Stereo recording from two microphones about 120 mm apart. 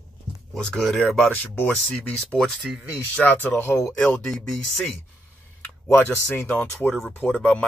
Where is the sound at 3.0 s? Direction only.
15° left (ahead or behind).